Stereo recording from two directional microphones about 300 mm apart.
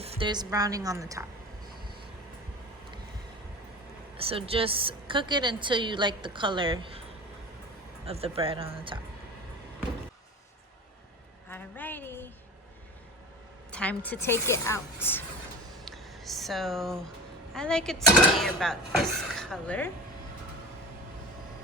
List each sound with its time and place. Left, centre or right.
0.0 s a woman's voice: centre
4.2 s a woman's voice: centre
8.0 s speech: centre
11.4 s speech: centre
13.7 s speech: centre
15.8 s a sound: centre
17.5 s speech: centre